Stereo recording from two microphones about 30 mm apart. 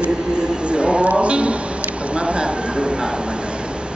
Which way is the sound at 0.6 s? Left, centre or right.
Right.